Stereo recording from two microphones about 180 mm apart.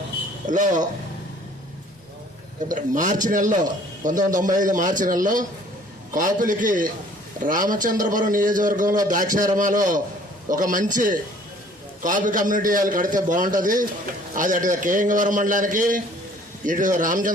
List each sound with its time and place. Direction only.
0.4 s speech: 45° right (ahead or behind)
2.6 s speech: 45° right (ahead or behind)